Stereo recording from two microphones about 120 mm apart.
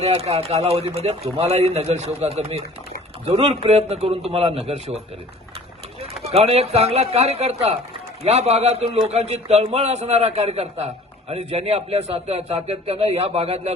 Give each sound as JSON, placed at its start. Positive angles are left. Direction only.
{"t": 0.0, "sound": "a man's voice", "side_deg": -60}
{"t": 6.2, "sound": "a man's voice", "side_deg": -60}